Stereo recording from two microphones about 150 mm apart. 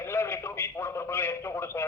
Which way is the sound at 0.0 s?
15° left (ahead or behind).